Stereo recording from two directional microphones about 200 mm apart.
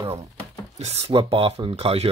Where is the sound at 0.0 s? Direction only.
30° right (ahead or behind).